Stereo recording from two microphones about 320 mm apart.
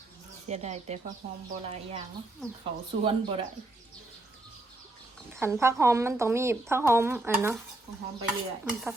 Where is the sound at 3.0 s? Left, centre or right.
Centre.